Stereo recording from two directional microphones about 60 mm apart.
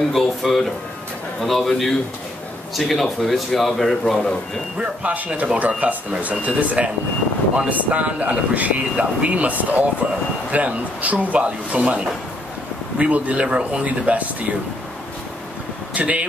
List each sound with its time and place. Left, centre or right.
0.1 s a man's voice: centre
4.7 s speech: right
15.9 s speech: right